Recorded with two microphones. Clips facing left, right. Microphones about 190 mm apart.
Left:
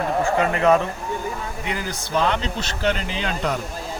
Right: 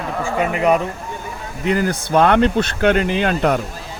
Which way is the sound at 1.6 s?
50° right (ahead or behind).